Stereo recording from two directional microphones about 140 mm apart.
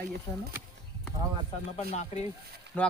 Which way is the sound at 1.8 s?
50° left (ahead or behind).